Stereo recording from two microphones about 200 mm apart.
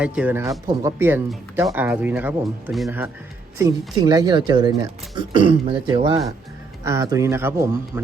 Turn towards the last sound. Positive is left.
turn(degrees=-15)  # may be behind; listen again after turning